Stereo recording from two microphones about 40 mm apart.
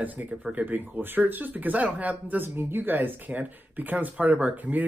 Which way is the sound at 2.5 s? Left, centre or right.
Right.